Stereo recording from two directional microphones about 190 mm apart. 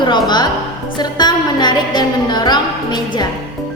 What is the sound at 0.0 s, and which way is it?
Speech, 25° left (ahead or behind).